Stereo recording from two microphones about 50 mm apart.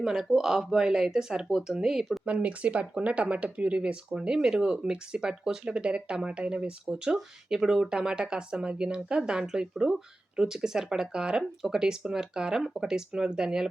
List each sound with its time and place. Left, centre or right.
0.0 s speech: centre
2.2 s speech: right